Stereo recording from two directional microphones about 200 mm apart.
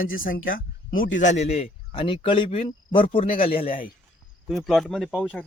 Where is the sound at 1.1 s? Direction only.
35° left (ahead or behind).